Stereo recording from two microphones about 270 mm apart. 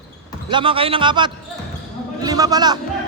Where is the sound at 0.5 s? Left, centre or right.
Centre.